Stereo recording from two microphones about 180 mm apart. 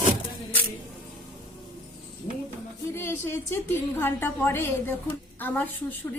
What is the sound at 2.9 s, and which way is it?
A woman's voice, 15° left (ahead or behind).